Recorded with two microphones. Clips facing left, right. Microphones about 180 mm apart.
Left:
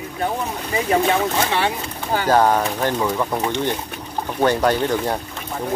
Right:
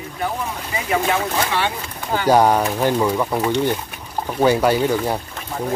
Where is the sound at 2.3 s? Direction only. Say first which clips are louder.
Right 2 dB; 10° right (ahead or behind).